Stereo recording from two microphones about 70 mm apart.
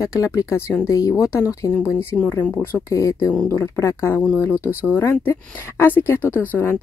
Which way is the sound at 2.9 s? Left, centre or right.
Left.